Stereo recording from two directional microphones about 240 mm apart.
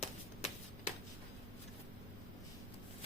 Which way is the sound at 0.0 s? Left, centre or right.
Left.